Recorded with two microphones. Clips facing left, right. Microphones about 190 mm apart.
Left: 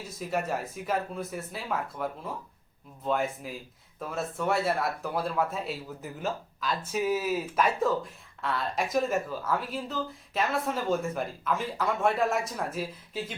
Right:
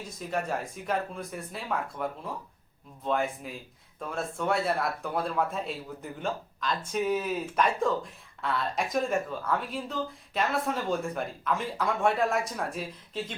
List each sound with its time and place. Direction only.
0.0 s a man's voice: 5° left (ahead or behind)